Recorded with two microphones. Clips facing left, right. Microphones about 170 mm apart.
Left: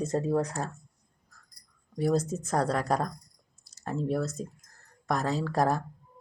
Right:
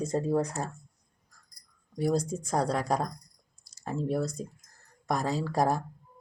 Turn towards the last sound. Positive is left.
turn(degrees=0)  # may be behind; listen again after turning